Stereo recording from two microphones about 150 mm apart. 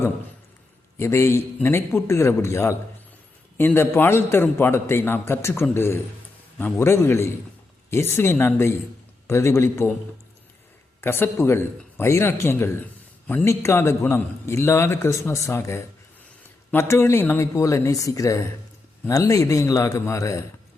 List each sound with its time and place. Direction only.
0.9 s a man's voice: 20° left (ahead or behind)
11.0 s a man's voice: 15° left (ahead or behind)